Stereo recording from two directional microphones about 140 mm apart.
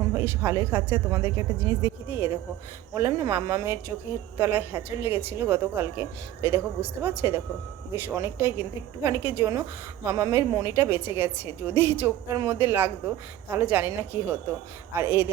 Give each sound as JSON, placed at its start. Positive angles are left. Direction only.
{"t": 0.1, "sound": "a woman's voice", "side_deg": -20}